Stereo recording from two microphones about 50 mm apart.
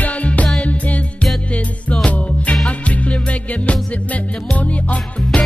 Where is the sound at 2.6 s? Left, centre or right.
Left.